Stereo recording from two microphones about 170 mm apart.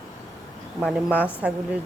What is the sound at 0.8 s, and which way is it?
Speech, 5° right (ahead or behind).